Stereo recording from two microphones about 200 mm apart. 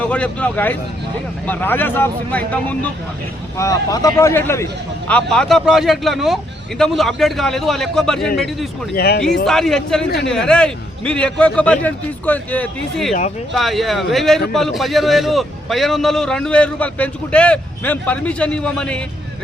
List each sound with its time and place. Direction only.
0.0 s speech: 5° left (ahead or behind)
9.0 s speech: 50° left (ahead or behind)
9.5 s speech: centre (ahead or behind)